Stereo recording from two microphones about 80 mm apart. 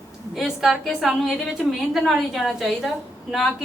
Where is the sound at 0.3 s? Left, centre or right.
Centre.